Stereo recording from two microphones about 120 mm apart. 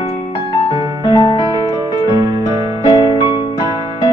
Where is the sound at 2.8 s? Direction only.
40° left (ahead or behind).